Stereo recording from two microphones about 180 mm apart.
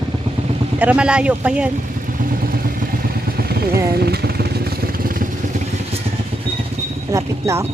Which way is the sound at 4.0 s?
60° right (ahead or behind).